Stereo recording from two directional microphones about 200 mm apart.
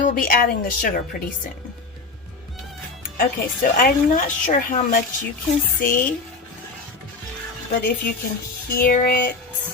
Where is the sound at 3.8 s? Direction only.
40° left (ahead or behind).